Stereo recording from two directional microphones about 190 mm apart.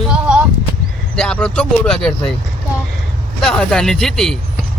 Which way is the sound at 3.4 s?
5° left (ahead or behind).